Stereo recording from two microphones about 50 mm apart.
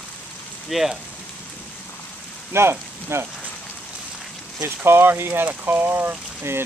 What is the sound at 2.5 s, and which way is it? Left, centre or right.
Speech, right.